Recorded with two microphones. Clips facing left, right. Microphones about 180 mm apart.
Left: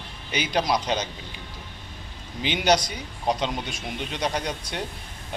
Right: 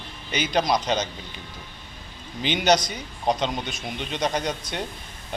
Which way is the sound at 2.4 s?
10° left (ahead or behind).